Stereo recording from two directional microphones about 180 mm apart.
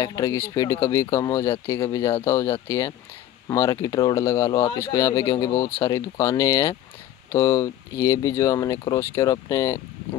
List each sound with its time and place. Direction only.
0.0 s speech: 20° left (ahead or behind)